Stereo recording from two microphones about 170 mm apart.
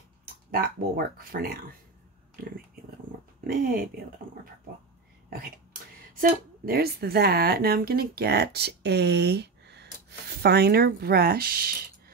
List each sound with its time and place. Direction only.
0.5 s speech: 60° right (ahead or behind)
2.4 s a sound: 60° right (ahead or behind)
3.4 s speech: 60° right (ahead or behind)
6.1 s speech: 60° right (ahead or behind)